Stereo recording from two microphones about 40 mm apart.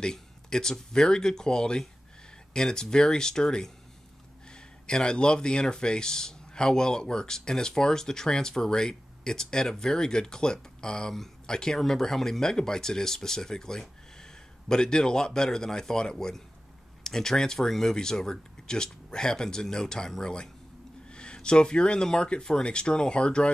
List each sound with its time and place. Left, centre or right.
0.0 s speech: centre